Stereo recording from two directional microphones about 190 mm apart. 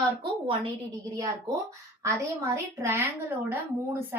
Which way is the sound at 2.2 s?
15° right (ahead or behind).